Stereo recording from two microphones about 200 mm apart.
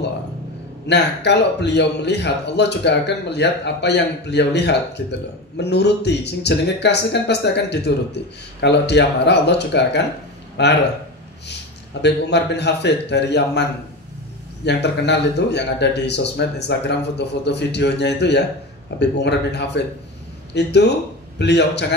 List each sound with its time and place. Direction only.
0.8 s speech: 60° left (ahead or behind)
12.0 s speech: 60° left (ahead or behind)